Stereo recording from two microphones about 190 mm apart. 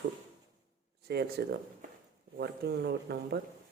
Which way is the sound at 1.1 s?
55° right (ahead or behind).